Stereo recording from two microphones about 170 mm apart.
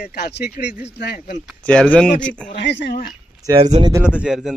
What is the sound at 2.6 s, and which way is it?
Speech, 90° left.